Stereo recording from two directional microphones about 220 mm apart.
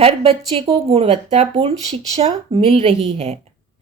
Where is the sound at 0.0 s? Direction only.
25° right (ahead or behind).